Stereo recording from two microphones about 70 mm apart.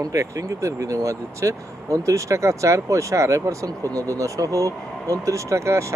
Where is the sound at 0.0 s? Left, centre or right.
Right.